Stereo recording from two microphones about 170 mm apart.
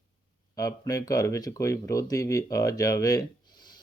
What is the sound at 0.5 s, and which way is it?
Speech, 20° left (ahead or behind).